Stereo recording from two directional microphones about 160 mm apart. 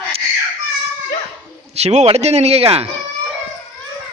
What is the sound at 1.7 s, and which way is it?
Speech, 45° right (ahead or behind).